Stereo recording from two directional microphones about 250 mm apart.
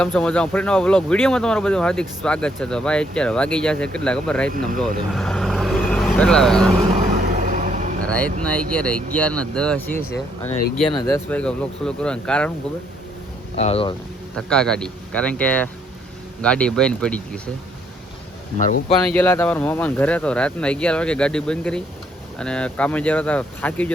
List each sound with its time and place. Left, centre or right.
0.0 s speech: centre
5.1 s vehicle: centre
7.4 s vehicle: right
8.0 s speech: centre
13.6 s speech: left
14.3 s speech: centre
18.5 s speech: left
19.1 s speech: centre